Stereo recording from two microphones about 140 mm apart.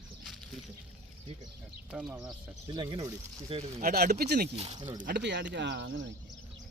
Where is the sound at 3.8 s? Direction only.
90° right.